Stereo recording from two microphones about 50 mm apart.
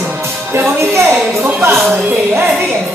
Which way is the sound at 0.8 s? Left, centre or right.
Right.